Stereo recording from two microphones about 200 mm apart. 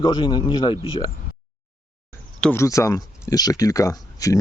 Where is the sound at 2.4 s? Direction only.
10° left (ahead or behind).